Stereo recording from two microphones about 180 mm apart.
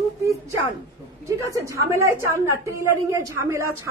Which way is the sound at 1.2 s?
15° right (ahead or behind).